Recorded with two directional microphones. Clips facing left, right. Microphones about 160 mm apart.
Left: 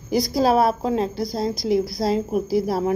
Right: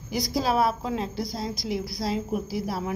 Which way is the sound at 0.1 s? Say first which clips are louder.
Left 7 dB; 40° left (ahead or behind).